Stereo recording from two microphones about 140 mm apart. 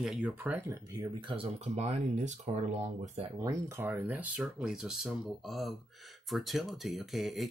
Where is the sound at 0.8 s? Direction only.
25° right (ahead or behind); by 3.3 s 50° right (ahead or behind).